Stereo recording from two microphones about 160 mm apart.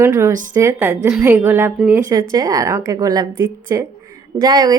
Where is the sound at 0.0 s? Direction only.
20° right (ahead or behind).